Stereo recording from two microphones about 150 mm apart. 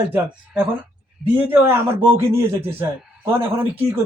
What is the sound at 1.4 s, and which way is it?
A man's voice, 10° right (ahead or behind).